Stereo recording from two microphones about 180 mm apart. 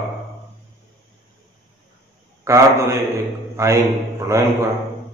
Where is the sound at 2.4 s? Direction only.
15° right (ahead or behind).